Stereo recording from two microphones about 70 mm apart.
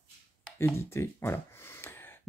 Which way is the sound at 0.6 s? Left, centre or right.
Left.